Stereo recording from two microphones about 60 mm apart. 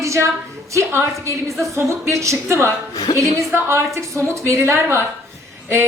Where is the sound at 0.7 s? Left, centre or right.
Right.